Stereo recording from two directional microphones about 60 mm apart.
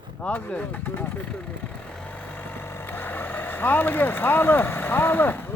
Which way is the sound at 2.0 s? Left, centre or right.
Left.